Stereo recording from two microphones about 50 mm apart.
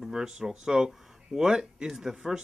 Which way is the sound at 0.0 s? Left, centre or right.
Centre.